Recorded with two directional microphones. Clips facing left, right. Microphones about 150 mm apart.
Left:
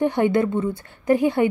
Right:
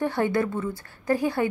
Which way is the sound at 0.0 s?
20° left (ahead or behind).